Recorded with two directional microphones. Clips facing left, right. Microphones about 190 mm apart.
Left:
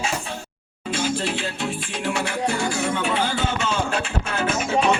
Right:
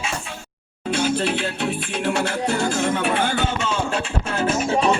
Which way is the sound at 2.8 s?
60° right (ahead or behind).